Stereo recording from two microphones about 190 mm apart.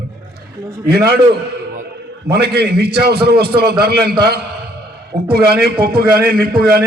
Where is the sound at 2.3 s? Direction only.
60° right (ahead or behind).